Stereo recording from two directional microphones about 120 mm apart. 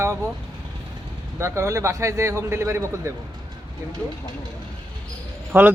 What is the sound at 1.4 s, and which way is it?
A man's voice, 25° right (ahead or behind).